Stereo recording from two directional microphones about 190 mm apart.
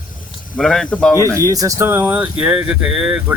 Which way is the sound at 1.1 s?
15° left (ahead or behind).